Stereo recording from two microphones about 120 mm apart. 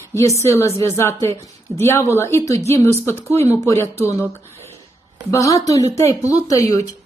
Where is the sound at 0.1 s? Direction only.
25° left (ahead or behind).